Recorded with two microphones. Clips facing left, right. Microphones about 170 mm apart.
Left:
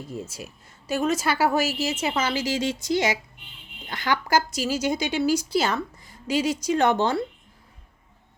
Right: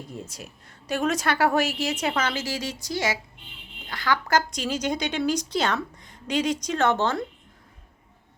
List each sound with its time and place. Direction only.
0.1 s a woman's voice: 5° left (ahead or behind); by 4.2 s 20° left (ahead or behind)
4.3 s speech: 5° left (ahead or behind)